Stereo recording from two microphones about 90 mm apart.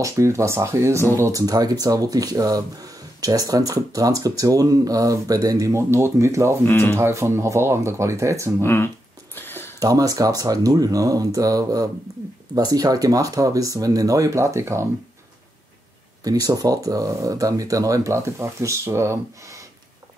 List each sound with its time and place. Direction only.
0.0 s speech: 35° right (ahead or behind)
1.4 s speech: 45° right (ahead or behind)
6.6 s speech: 25° left (ahead or behind)
7.0 s speech: 30° right (ahead or behind)
8.6 s a sound: 25° left (ahead or behind)
9.8 s speech: 40° right (ahead or behind)
16.3 s speech: 45° right (ahead or behind)